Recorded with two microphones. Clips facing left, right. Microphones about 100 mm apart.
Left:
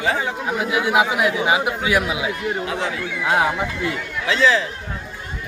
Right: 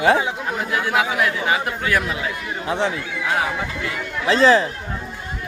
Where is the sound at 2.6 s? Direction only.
30° right (ahead or behind).